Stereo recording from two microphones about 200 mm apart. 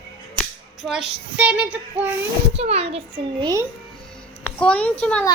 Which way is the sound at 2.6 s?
30° right (ahead or behind).